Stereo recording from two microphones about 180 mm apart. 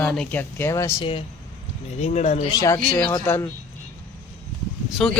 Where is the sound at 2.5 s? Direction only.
15° left (ahead or behind).